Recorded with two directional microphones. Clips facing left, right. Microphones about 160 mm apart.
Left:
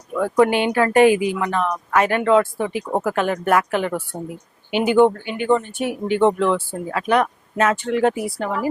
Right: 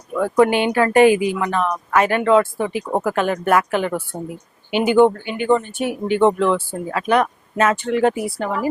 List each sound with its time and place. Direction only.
0.1 s speech: 20° right (ahead or behind)
4.1 s speech: 30° right (ahead or behind)
4.7 s speech: 10° right (ahead or behind)